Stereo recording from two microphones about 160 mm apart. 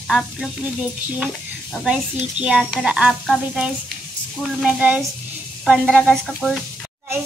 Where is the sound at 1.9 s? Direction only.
5° right (ahead or behind).